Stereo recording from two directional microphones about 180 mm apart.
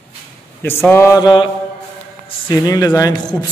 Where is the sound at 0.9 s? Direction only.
15° left (ahead or behind).